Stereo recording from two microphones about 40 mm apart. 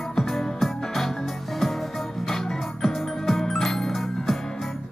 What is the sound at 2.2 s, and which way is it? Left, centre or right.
Music, centre.